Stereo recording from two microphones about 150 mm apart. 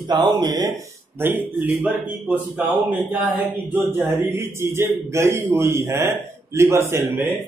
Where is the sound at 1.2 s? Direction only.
15° right (ahead or behind).